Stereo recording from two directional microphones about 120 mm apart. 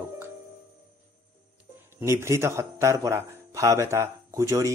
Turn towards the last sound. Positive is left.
turn(degrees=-25)  # may be behind; listen again after turning